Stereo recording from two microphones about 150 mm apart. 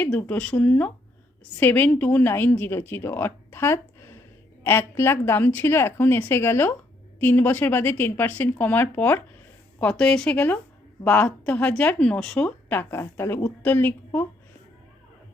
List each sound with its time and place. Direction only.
0.0 s speech: 10° left (ahead or behind)